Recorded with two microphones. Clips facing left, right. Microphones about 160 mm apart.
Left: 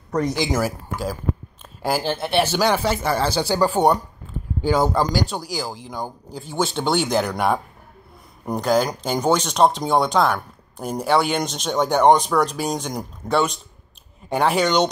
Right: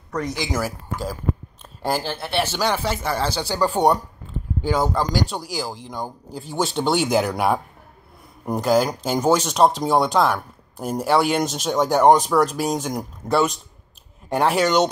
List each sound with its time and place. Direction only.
0.1 s speech: 30° left (ahead or behind)
0.5 s speech: 15° left (ahead or behind)
1.8 s speech: 5° left (ahead or behind)
2.0 s speech: 20° left (ahead or behind); by 14.9 s 5° right (ahead or behind)